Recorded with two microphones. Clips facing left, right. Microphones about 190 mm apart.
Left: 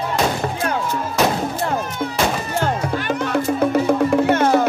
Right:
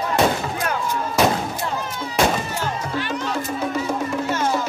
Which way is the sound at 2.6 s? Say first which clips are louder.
Left 4 dB; 55° left (ahead or behind).